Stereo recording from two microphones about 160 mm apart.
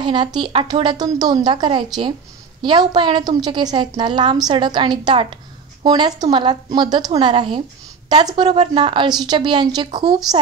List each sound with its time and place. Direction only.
0.0 s a woman's voice: 30° right (ahead or behind)